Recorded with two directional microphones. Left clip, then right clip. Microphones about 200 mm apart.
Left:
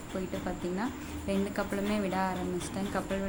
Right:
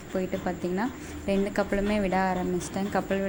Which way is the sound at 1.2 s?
20° right (ahead or behind).